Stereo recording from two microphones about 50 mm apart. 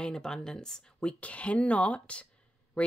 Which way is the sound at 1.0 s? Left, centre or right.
Left.